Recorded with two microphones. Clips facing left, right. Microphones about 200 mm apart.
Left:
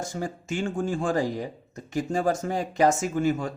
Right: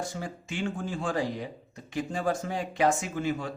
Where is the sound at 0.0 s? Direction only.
45° left (ahead or behind).